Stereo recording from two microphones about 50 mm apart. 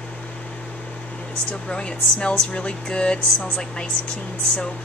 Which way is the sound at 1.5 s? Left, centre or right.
Centre.